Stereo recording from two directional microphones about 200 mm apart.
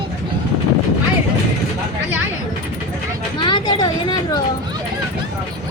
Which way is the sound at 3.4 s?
25° left (ahead or behind).